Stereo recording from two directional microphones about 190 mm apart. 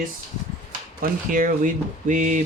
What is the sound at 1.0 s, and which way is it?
Speech, 45° right (ahead or behind).